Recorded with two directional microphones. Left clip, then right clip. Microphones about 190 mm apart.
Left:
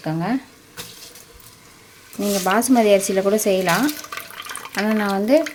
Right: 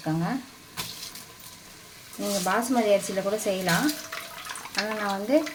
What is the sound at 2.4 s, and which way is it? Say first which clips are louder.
Speech: left 8 dB; 60° left (ahead or behind).